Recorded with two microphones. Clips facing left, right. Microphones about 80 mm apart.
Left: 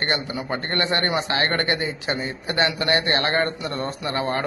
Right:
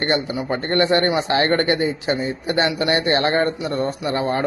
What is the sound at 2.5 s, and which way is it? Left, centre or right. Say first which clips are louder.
A man's voice: right 2 dB; right.